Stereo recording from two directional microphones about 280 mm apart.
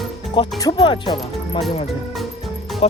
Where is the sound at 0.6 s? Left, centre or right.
Centre.